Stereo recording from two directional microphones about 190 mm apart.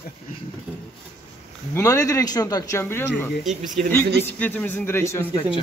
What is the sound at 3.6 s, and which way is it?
Speech, 40° right (ahead or behind).